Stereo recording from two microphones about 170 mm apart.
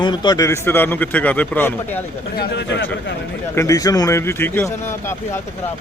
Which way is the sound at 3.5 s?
20° left (ahead or behind).